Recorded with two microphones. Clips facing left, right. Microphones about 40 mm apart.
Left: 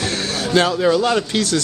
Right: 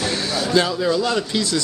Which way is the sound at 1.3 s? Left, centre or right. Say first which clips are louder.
Left 2 dB; left.